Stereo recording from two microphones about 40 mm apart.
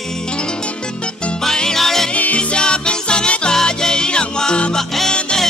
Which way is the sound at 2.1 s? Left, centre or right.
Left.